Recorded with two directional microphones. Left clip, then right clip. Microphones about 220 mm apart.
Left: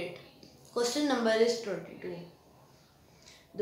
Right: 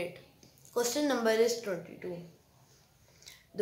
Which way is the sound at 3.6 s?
25° right (ahead or behind).